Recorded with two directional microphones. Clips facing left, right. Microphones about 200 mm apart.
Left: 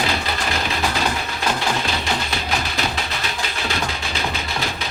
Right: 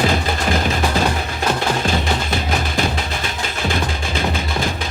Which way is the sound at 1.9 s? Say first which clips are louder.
Right 4 dB; 50° right (ahead or behind).